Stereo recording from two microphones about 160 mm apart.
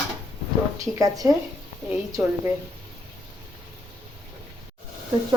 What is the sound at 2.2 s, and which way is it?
Speech, 10° right (ahead or behind).